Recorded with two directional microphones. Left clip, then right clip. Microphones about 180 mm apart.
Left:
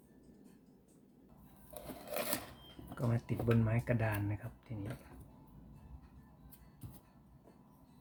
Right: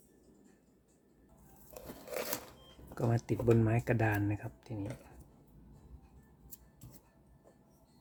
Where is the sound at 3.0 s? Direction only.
65° right (ahead or behind).